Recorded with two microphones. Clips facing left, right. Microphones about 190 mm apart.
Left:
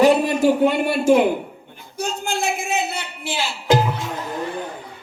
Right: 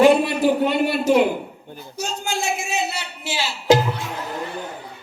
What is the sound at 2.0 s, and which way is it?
Music, 55° left (ahead or behind).